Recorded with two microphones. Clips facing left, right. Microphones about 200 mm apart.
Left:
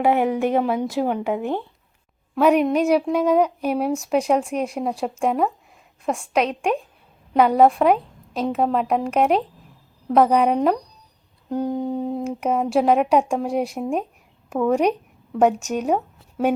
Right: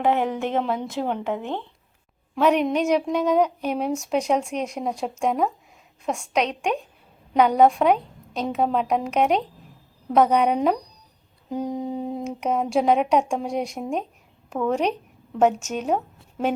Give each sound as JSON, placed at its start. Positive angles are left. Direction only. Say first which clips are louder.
{"t": 0.0, "sound": "a woman's voice", "louder": "left 3 dB", "side_deg": 10}